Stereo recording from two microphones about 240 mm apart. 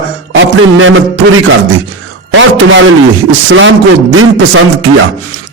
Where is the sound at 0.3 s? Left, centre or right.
Right.